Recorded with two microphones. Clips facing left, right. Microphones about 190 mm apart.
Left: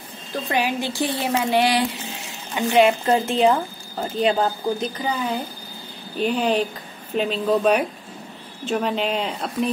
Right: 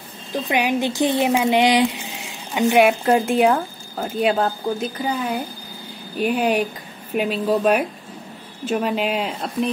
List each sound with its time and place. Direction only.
0.5 s a woman's voice: 15° right (ahead or behind); by 9.7 s centre (ahead or behind)